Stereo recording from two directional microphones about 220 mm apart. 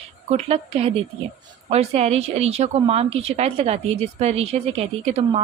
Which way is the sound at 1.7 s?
30° right (ahead or behind).